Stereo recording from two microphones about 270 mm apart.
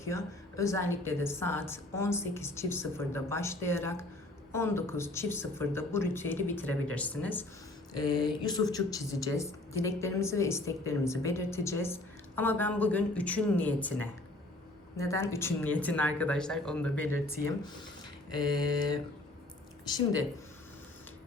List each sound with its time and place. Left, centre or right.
0.0 s a woman's voice: centre